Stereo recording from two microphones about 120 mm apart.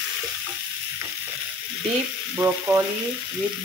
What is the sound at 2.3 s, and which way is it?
Frying, 20° right (ahead or behind).